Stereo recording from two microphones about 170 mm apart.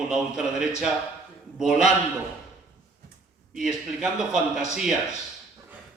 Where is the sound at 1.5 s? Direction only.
5° right (ahead or behind).